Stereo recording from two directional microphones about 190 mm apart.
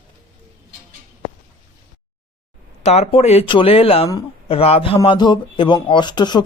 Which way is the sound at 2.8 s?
35° left (ahead or behind).